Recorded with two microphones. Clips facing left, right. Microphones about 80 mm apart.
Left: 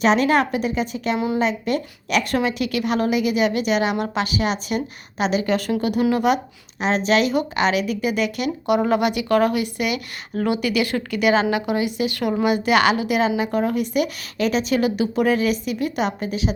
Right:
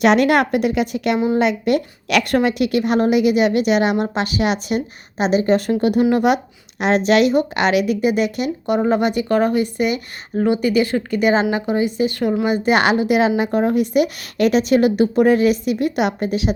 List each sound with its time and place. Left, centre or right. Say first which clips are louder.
0.0 s a woman's voice: right 3 dB; right
2.3 s a woman's voice: right 5 dB; right
5.1 s a woman's voice: right 5 dB; right
8.6 s a woman's voice: right 1 dB; right
12.5 s a woman's voice: even; right